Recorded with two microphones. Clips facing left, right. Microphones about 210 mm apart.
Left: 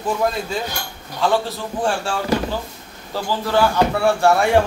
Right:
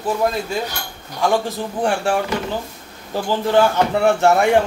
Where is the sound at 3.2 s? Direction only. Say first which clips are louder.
Right 3 dB; 20° right (ahead or behind).